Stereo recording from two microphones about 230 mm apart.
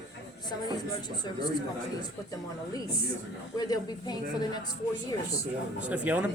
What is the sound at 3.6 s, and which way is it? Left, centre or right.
A man's voice, centre.